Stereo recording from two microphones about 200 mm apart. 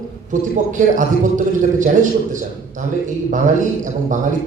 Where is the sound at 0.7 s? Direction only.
40° right (ahead or behind).